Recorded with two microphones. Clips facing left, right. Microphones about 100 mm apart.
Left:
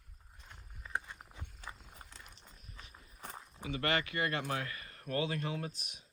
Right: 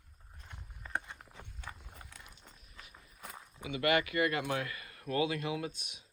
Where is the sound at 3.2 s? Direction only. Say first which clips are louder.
Left 1 dB; 35° left (ahead or behind).